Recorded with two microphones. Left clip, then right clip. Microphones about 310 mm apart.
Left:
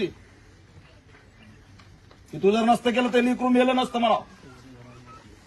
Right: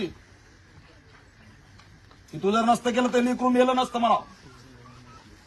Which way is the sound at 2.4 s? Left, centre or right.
Centre.